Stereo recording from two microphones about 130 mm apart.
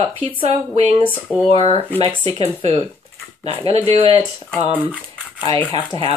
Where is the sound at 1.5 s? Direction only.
45° left (ahead or behind).